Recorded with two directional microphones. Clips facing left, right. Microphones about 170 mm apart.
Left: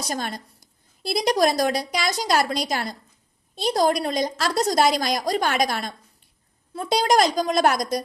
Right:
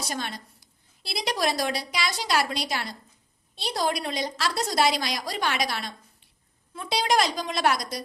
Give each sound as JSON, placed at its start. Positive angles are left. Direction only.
{"t": 0.0, "sound": "a woman's voice", "side_deg": 45}